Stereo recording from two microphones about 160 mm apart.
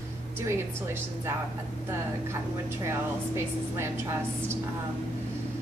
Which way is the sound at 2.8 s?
15° right (ahead or behind).